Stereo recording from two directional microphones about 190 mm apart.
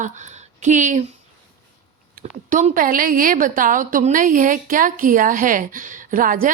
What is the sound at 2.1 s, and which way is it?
A woman's voice, 45° right (ahead or behind).